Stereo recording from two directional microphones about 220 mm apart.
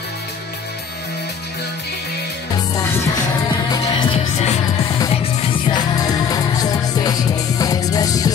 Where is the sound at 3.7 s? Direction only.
20° left (ahead or behind).